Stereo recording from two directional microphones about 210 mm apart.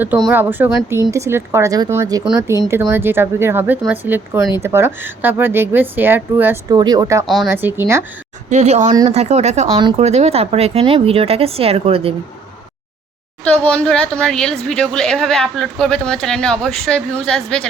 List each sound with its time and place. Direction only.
0.0 s speech: 5° right (ahead or behind)
2.2 s speech: 5° right (ahead or behind)
7.3 s speech: centre (ahead or behind)
8.4 s speech: 30° right (ahead or behind)
9.6 s speech: 20° right (ahead or behind)
10.0 s speech: 30° right (ahead or behind)
13.4 s speech: 5° left (ahead or behind)